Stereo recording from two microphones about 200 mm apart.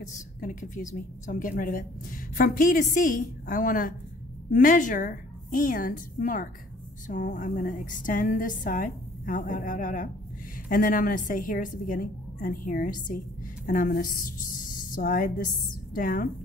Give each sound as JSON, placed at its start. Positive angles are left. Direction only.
{"t": 0.1, "sound": "a woman's voice", "side_deg": 40}